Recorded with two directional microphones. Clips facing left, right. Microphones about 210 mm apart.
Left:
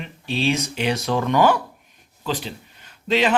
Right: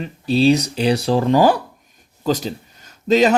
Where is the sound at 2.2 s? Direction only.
40° right (ahead or behind).